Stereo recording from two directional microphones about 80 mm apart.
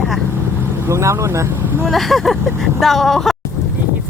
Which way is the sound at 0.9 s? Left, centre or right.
Right.